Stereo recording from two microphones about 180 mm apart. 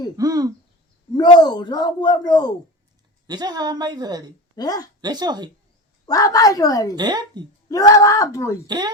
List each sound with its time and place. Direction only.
0.2 s a woman's voice: 20° right (ahead or behind)
1.1 s speech: 25° left (ahead or behind)
3.2 s a woman's voice: 20° right (ahead or behind)
4.5 s speech: 20° left (ahead or behind)
4.9 s a woman's voice: 20° right (ahead or behind)
6.1 s speech: 20° left (ahead or behind)
6.9 s a woman's voice: 25° right (ahead or behind)
7.7 s speech: 20° left (ahead or behind)
8.6 s a woman's voice: 25° right (ahead or behind)